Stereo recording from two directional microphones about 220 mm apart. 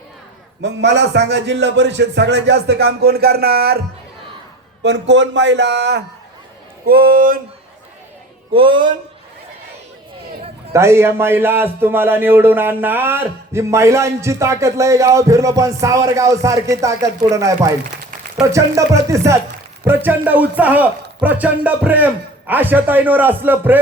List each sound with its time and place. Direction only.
0.6 s a man's voice: 50° right (ahead or behind)
6.8 s music: 45° right (ahead or behind)
8.5 s speech: 25° right (ahead or behind)
10.7 s a man's voice: 10° right (ahead or behind)